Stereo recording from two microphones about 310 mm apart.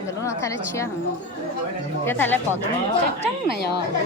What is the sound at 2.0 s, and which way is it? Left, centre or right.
Speech, centre.